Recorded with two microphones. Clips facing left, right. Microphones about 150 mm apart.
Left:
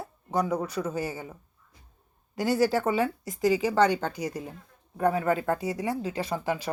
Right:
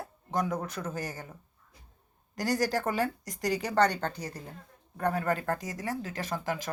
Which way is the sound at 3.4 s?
5° left (ahead or behind).